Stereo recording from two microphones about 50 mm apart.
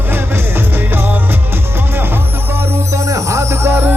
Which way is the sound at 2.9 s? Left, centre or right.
Right.